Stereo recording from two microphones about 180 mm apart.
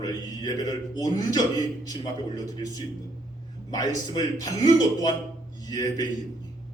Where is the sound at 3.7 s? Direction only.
20° left (ahead or behind).